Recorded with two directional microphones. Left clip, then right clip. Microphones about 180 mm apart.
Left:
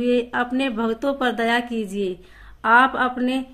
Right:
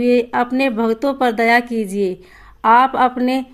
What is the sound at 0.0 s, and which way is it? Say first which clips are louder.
Speech: right 5 dB; 35° right (ahead or behind).